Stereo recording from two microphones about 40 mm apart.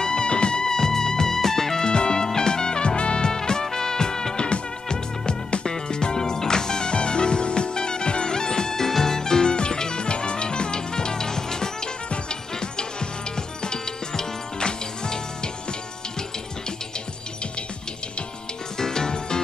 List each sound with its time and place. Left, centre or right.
0.0 s music: centre
18.8 s music: centre